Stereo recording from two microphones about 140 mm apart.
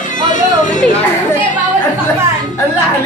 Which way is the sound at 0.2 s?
65° left (ahead or behind).